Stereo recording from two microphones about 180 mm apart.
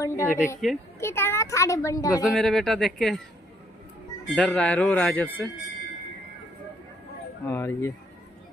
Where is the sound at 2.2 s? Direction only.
Centre (ahead or behind).